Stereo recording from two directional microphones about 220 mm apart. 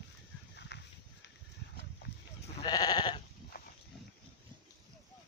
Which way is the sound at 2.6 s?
15° left (ahead or behind).